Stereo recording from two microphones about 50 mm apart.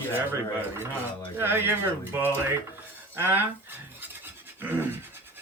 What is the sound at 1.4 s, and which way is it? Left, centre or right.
Speech, right.